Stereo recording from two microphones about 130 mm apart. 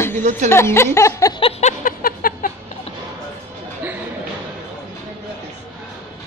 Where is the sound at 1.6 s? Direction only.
75° left (ahead or behind).